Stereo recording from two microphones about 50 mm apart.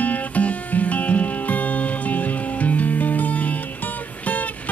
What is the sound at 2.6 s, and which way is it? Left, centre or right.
Music, left.